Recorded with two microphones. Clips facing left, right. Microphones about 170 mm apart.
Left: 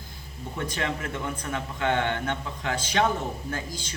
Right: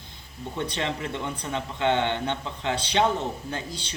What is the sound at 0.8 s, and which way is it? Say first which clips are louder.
Speech: left 1 dB; 25° right (ahead or behind).